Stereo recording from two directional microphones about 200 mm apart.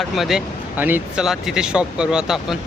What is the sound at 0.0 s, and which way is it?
Speech, centre (ahead or behind).